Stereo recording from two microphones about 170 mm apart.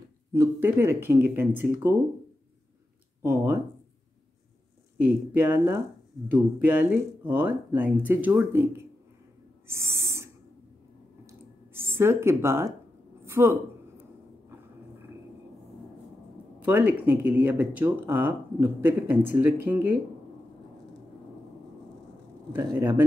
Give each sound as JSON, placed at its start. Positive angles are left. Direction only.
{"t": 0.3, "sound": "speech", "side_deg": -15}
{"t": 3.2, "sound": "speech", "side_deg": -15}
{"t": 4.9, "sound": "speech", "side_deg": -10}
{"t": 9.7, "sound": "owl", "side_deg": -15}
{"t": 11.2, "sound": "a sound", "side_deg": -15}
{"t": 16.5, "sound": "speech", "side_deg": -10}
{"t": 22.8, "sound": "speech", "side_deg": -20}